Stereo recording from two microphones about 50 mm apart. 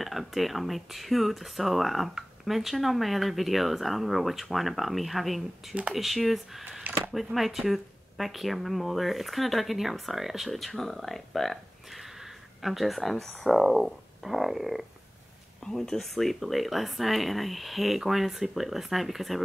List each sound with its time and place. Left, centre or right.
0.0 s speech: centre
6.8 s a sound: right
7.3 s speech: centre
15.6 s speech: centre